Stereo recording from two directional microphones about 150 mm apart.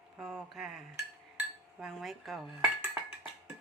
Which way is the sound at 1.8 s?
Centre (ahead or behind).